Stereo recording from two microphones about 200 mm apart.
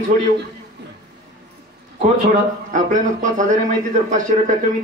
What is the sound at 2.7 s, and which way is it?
A man's voice, 40° right (ahead or behind).